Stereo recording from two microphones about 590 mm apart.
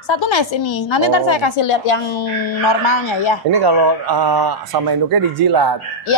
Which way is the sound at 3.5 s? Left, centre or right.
Right.